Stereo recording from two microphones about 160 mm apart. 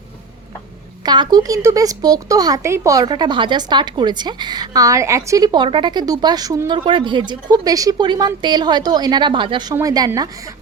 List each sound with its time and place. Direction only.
1.0 s speech: 25° right (ahead or behind)